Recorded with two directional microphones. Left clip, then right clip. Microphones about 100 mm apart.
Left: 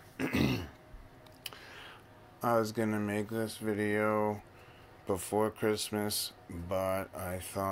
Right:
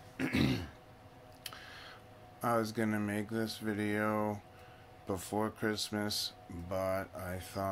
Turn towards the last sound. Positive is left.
turn(degrees=20)  # may be behind; listen again after turning